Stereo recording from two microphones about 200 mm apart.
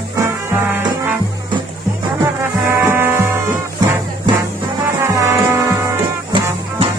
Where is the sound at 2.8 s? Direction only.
10° right (ahead or behind).